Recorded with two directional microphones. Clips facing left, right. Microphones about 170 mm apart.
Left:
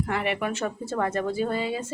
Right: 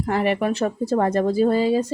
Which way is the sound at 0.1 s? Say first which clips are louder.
Right 6 dB; 35° right (ahead or behind).